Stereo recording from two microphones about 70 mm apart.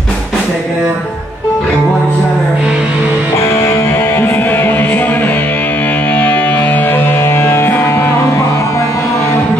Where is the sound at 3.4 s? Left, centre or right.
Left.